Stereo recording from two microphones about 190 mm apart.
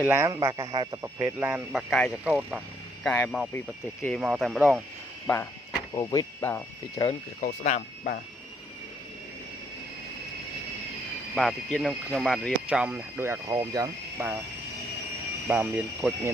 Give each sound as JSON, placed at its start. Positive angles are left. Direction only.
{"t": 0.0, "sound": "a man's voice", "side_deg": -15}
{"t": 4.2, "sound": "speech", "side_deg": -5}
{"t": 5.2, "sound": "speech", "side_deg": 10}
{"t": 7.4, "sound": "speech", "side_deg": 40}
{"t": 11.3, "sound": "speech", "side_deg": 0}
{"t": 15.4, "sound": "speech", "side_deg": -5}